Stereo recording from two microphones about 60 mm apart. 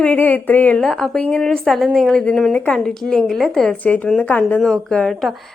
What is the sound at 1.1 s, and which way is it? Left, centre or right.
Speech, left.